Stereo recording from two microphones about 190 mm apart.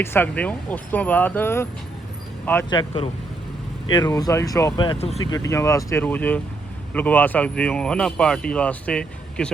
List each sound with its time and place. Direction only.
0.0 s speech: 10° left (ahead or behind)
2.6 s speech: 25° left (ahead or behind)
5.2 s speech: 20° left (ahead or behind)